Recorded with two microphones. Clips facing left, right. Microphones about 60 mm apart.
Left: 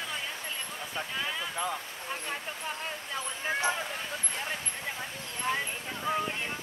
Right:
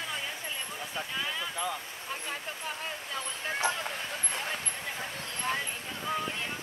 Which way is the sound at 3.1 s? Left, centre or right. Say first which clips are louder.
Left 2 dB; centre.